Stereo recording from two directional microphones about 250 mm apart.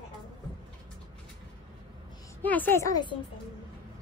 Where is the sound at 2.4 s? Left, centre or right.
Centre.